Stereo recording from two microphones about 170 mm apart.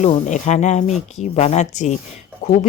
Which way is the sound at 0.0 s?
40° left (ahead or behind).